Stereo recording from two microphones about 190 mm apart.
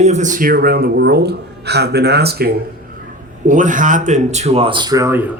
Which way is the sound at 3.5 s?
40° right (ahead or behind).